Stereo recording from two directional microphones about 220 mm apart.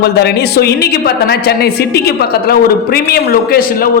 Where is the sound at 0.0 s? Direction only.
45° left (ahead or behind).